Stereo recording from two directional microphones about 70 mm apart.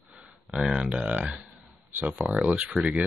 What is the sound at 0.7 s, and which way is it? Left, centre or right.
Speech, centre.